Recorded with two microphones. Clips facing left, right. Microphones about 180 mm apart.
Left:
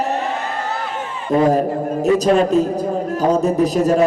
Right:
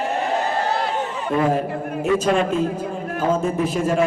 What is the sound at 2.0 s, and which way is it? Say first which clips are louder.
A man's voice: left 4 dB; 40° left (ahead or behind).